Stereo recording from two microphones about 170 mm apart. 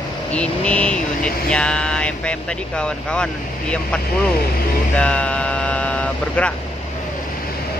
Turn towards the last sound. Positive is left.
turn(degrees=5)  # may be behind; listen again after turning